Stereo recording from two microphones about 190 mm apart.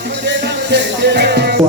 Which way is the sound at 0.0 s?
65° right (ahead or behind).